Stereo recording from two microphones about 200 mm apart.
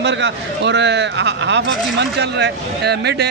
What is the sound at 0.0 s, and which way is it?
Speech, 60° right (ahead or behind).